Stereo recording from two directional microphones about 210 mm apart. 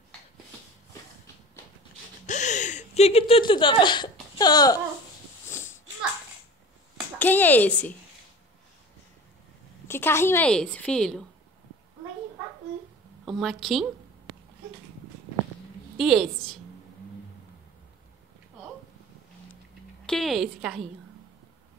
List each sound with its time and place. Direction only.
2.2 s a sound: 35° left (ahead or behind); by 5.8 s 10° left (ahead or behind)
7.2 s a woman's voice: 10° left (ahead or behind)
9.8 s a woman's voice: 10° left (ahead or behind)
13.2 s a woman's voice: centre (ahead or behind)
16.0 s a woman's voice: centre (ahead or behind)
20.1 s a woman's voice: centre (ahead or behind)